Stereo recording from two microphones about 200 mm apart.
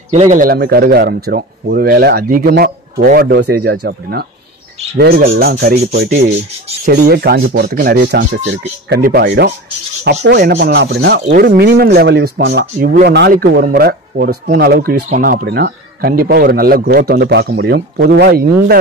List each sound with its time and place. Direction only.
0.1 s speech: 35° right (ahead or behind)